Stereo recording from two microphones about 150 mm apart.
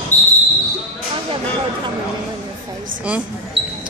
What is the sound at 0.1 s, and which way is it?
Basketball bounce, 10° left (ahead or behind).